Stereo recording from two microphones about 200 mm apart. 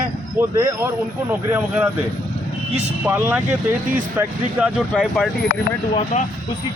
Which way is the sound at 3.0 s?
10° right (ahead or behind).